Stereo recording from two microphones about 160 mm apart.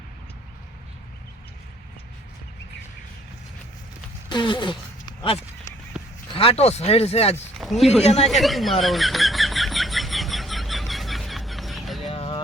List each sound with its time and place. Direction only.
4.3 s a sound: 30° left (ahead or behind)
6.3 s speech: 35° left (ahead or behind)
7.6 s speech: centre (ahead or behind)
8.0 s speech: 40° left (ahead or behind)
8.3 s a sound: centre (ahead or behind)
12.1 s music: 35° left (ahead or behind)